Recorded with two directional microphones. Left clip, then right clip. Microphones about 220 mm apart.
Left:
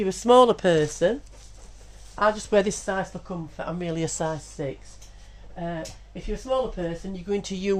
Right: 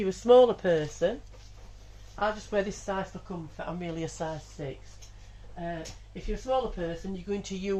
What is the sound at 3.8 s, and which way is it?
Speech, 50° left (ahead or behind).